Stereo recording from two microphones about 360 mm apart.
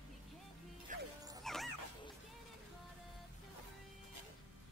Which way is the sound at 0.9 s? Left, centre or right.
Right.